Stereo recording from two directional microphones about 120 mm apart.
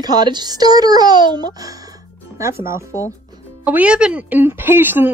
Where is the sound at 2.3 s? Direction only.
25° right (ahead or behind).